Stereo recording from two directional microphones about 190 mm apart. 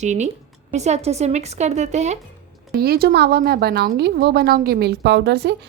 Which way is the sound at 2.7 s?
55° right (ahead or behind).